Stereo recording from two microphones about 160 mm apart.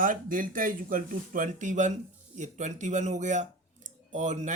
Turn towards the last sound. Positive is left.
turn(degrees=-50)  # may be behind; listen again after turning